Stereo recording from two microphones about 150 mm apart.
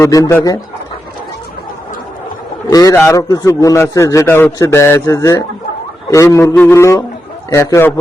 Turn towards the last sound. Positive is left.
turn(degrees=20)  # may be behind; listen again after turning